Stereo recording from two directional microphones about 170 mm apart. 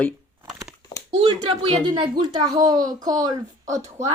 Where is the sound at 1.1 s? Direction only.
35° right (ahead or behind).